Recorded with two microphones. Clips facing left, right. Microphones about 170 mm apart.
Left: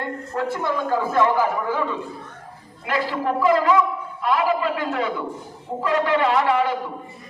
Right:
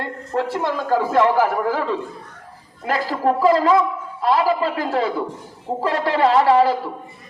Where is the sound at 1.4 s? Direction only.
90° right.